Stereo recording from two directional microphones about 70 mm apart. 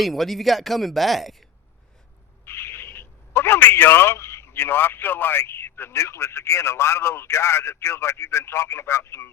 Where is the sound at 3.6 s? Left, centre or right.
Left.